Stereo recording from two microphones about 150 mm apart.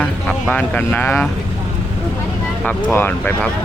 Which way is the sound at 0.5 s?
10° left (ahead or behind).